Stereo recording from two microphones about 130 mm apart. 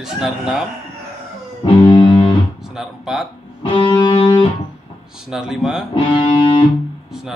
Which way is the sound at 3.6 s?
40° left (ahead or behind).